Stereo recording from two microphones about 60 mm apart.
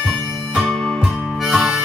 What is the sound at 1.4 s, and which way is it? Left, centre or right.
Harmonica, centre.